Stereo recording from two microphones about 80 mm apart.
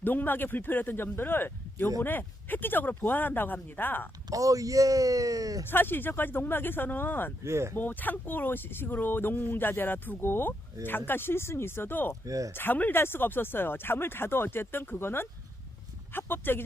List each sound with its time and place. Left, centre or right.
0.0 s speech: left
4.3 s speech: right
5.6 s speech: left
7.4 s speech: right
7.8 s speech: left
12.2 s speech: right
12.5 s speech: left